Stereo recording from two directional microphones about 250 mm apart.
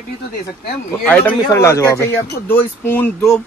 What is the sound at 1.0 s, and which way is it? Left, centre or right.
Speech, centre.